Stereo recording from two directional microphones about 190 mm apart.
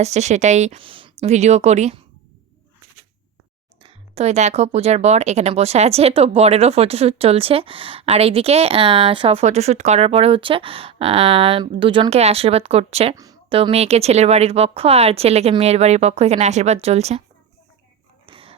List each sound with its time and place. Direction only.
0.0 s speech: 35° right (ahead or behind)
3.8 s speech: 35° right (ahead or behind)
13.1 s speech: 20° right (ahead or behind); by 17.2 s 35° right (ahead or behind)
18.3 s a sound: 30° right (ahead or behind)